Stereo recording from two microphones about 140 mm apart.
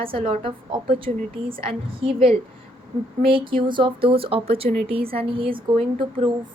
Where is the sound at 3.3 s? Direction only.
35° right (ahead or behind).